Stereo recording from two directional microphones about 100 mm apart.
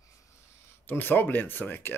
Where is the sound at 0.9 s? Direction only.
20° left (ahead or behind).